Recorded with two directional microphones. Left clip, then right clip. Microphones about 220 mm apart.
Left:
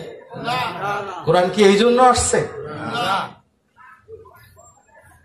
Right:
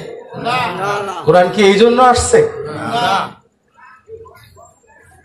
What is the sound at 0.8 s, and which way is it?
Speech, 40° right (ahead or behind).